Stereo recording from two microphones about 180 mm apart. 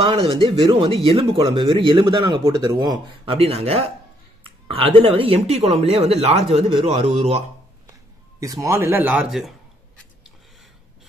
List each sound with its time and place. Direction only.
0.0 s speech: 30° right (ahead or behind)
3.3 s speech: 35° right (ahead or behind)
8.4 s speech: 15° right (ahead or behind)